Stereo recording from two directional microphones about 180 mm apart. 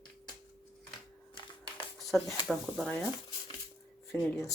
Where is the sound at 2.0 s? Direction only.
Centre (ahead or behind).